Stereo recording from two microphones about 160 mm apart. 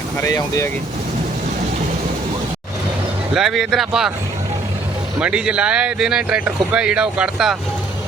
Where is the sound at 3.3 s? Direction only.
Centre (ahead or behind).